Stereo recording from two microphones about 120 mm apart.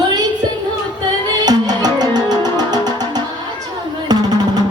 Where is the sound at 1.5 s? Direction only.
35° right (ahead or behind).